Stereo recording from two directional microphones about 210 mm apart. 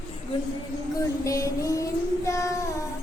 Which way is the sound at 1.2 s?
15° left (ahead or behind).